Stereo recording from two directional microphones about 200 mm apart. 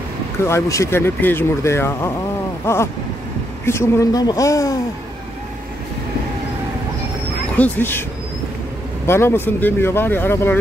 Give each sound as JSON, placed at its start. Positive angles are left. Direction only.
{"t": 0.5, "sound": "speech", "side_deg": 15}
{"t": 7.5, "sound": "speech", "side_deg": 10}
{"t": 9.0, "sound": "speech", "side_deg": 10}